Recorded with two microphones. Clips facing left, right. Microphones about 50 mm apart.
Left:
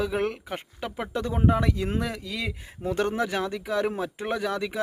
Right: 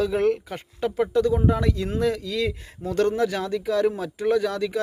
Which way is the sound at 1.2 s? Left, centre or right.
Left.